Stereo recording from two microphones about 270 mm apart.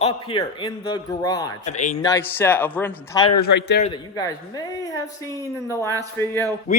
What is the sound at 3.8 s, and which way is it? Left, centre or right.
Speech, centre.